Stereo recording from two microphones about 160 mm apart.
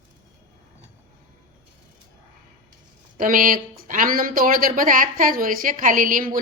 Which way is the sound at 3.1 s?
60° right (ahead or behind).